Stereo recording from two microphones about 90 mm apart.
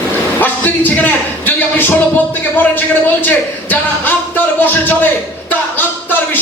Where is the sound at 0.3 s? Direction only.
20° left (ahead or behind).